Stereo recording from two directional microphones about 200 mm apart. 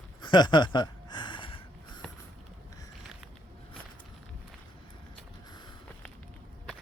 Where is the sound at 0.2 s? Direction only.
20° left (ahead or behind).